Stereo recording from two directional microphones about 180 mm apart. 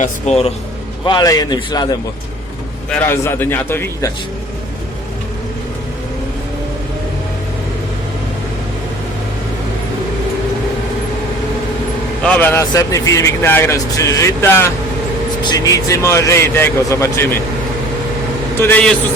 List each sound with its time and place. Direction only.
0.0 s speech: 35° left (ahead or behind)
1.0 s a man's voice: 25° left (ahead or behind)
2.9 s speech: 10° left (ahead or behind)
12.2 s speech: 10° left (ahead or behind)
18.6 s speech: 5° left (ahead or behind)